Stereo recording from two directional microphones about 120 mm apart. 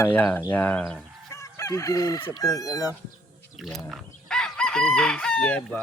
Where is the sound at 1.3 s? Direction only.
25° left (ahead or behind).